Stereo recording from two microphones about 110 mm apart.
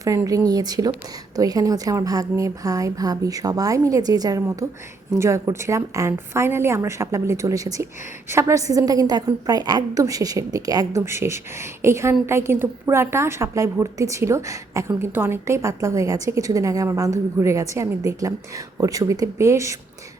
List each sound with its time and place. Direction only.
0.3 s a woman's voice: 35° right (ahead or behind)